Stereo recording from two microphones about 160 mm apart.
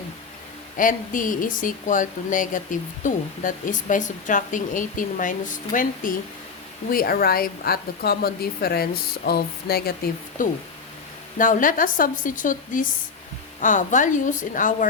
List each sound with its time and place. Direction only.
0.8 s speech: 55° left (ahead or behind)